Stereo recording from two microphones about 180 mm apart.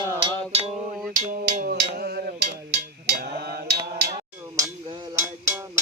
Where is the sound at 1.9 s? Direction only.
65° right (ahead or behind).